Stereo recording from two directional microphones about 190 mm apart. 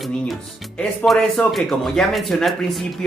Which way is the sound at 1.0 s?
Centre (ahead or behind).